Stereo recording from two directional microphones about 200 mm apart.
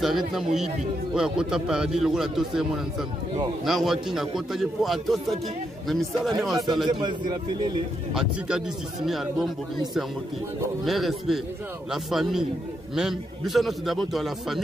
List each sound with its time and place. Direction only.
0.0 s a man's voice: centre (ahead or behind)
6.9 s speech: 20° right (ahead or behind)
8.1 s a man's voice: 5° right (ahead or behind)
10.8 s a man's voice: centre (ahead or behind)